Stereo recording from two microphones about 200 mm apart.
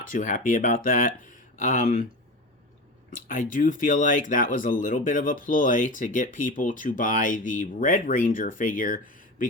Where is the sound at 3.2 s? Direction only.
45° left (ahead or behind).